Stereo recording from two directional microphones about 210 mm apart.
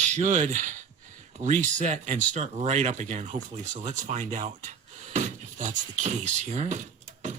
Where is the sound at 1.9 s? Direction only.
35° right (ahead or behind).